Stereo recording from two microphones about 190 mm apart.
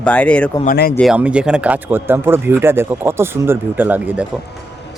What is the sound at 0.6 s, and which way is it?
Speech, 55° left (ahead or behind).